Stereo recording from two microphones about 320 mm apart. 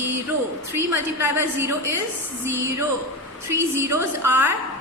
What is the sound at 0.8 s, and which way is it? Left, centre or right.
Speech, right.